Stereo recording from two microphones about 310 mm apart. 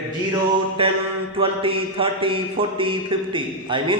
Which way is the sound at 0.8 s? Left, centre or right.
Centre.